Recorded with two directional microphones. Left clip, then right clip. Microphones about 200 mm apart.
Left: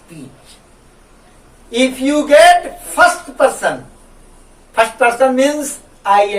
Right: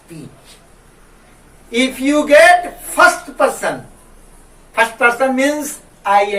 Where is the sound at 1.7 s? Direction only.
10° left (ahead or behind).